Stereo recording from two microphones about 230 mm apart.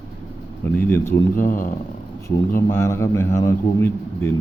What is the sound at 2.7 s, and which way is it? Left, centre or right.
A man's voice, centre.